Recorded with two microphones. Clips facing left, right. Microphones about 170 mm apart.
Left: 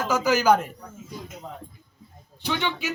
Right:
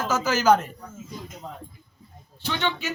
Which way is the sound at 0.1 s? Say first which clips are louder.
Even; 15° left (ahead or behind).